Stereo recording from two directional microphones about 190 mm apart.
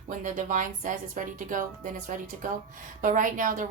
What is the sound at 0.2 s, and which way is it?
A woman's voice, 45° right (ahead or behind).